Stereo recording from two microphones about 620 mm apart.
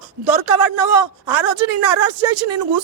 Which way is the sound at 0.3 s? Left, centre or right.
Right.